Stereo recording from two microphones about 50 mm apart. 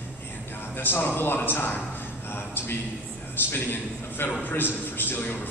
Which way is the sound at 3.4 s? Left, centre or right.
Left.